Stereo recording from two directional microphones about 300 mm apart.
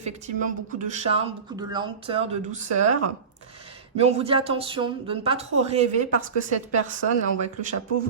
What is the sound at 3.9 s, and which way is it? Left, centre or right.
Speech, right.